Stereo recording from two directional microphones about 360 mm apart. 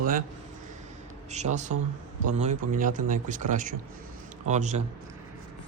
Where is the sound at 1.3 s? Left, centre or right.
Centre.